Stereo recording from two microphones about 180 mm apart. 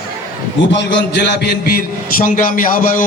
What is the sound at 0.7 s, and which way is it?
A man's voice, 75° left (ahead or behind).